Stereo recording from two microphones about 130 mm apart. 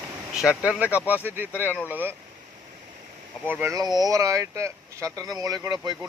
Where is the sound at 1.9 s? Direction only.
15° right (ahead or behind).